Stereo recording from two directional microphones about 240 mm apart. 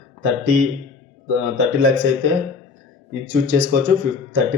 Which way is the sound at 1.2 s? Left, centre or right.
Right.